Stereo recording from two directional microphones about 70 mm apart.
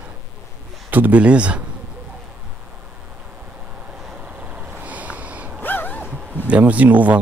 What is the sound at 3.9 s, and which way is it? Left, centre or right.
Vehicle, centre.